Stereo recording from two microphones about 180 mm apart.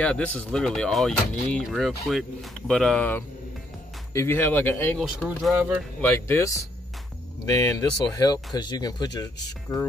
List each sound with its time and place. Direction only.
0.0 s speech: 5° left (ahead or behind)
4.9 s speech: centre (ahead or behind)
5.9 s speech: 10° left (ahead or behind)